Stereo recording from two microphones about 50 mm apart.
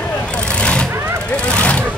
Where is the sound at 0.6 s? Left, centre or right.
Left.